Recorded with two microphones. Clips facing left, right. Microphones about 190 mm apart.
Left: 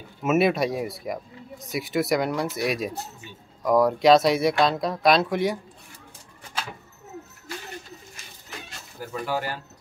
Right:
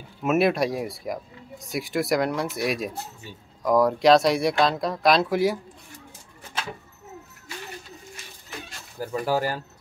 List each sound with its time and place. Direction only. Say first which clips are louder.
0.2 s speech: even; centre (ahead or behind)
9.0 s speech: right 4 dB; 40° right (ahead or behind)